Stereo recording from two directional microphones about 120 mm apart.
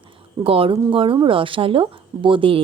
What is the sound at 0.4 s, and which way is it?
Speech, 50° right (ahead or behind).